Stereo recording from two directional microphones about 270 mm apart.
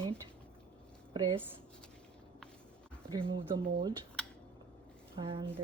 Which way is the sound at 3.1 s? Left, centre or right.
Centre.